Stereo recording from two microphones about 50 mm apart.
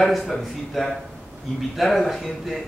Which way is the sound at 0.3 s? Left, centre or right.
Centre.